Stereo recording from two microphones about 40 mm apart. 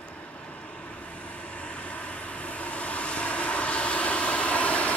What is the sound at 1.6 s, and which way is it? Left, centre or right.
Vehicle, left.